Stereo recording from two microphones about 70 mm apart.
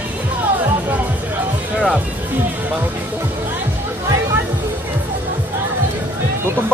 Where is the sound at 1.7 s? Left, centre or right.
Centre.